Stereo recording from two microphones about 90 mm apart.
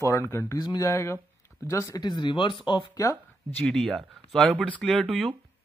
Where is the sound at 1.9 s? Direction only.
55° left (ahead or behind).